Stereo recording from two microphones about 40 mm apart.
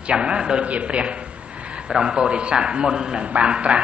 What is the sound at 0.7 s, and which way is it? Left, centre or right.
Speech, right.